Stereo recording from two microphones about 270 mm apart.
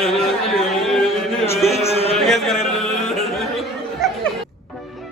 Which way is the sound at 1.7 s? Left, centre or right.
Left.